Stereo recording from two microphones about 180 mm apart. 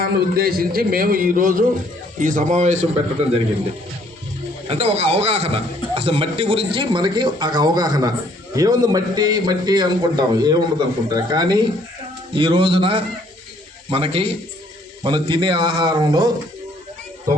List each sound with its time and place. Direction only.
0.0 s a man's voice: 55° right (ahead or behind); by 3.4 s 35° right (ahead or behind)
4.7 s a man's voice: 35° right (ahead or behind)